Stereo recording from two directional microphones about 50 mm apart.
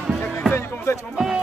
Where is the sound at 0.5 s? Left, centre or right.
Left.